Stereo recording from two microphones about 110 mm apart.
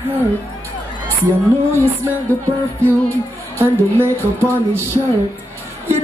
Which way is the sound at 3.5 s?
25° right (ahead or behind).